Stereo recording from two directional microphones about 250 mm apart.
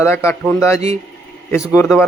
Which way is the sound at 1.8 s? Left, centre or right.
Centre.